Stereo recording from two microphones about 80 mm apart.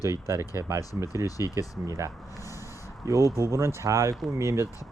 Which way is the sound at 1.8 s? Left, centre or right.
Right.